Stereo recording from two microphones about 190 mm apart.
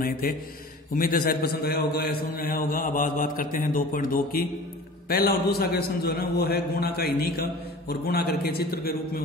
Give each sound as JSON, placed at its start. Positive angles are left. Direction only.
{"t": 0.0, "sound": "a man's voice", "side_deg": 50}